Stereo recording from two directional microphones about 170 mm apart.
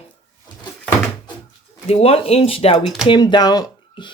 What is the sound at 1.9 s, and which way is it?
Speech, 35° left (ahead or behind).